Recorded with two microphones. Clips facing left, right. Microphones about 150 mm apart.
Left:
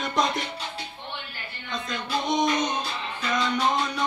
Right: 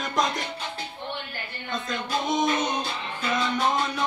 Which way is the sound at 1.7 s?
Centre (ahead or behind).